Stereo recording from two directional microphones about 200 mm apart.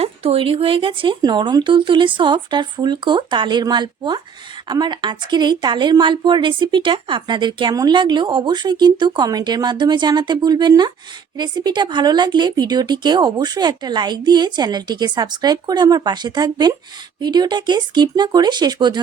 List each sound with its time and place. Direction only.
0.0 s a woman's voice: 30° right (ahead or behind)